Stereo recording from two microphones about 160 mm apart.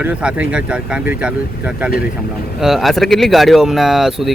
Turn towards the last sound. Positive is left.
turn(degrees=0)  # may be behind; listen again after turning